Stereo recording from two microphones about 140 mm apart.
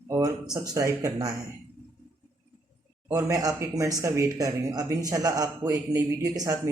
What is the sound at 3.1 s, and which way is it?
Speech, 20° right (ahead or behind).